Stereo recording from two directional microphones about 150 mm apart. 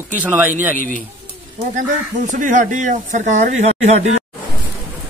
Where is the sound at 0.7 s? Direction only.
60° right (ahead or behind).